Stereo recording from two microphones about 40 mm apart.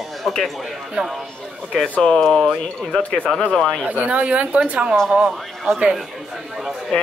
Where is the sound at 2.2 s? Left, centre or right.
Centre.